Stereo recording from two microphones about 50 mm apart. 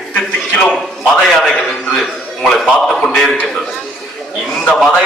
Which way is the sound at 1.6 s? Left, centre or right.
Centre.